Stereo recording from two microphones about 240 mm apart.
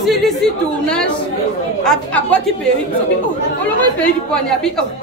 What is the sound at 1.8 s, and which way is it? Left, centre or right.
Speech, centre.